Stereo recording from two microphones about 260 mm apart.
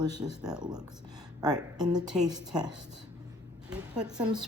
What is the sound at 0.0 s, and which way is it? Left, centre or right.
Speech, centre.